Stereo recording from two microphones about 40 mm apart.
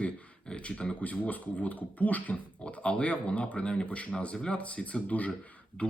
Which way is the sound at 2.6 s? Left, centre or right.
Left.